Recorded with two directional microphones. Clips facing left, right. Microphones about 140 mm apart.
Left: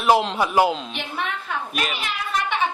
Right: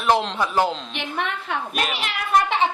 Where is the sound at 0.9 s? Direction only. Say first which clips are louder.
Right 1 dB; 60° right (ahead or behind).